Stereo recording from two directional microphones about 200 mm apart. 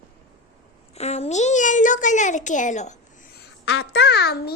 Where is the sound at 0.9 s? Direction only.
30° left (ahead or behind).